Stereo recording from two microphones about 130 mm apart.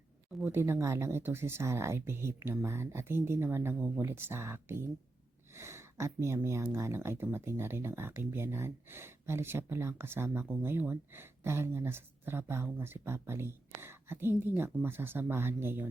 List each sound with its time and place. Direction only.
0.5 s speech: 20° right (ahead or behind)